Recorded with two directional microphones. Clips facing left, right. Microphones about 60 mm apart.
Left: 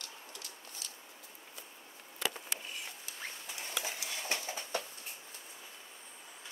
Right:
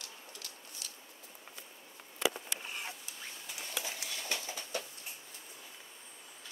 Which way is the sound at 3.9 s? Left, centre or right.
Left.